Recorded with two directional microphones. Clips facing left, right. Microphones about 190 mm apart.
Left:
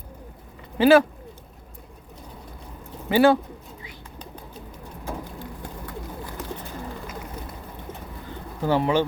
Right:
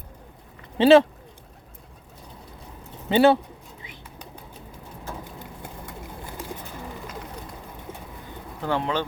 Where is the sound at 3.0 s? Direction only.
20° right (ahead or behind).